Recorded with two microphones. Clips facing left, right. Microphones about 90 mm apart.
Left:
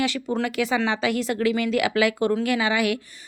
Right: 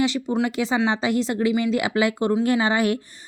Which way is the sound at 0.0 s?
20° right (ahead or behind).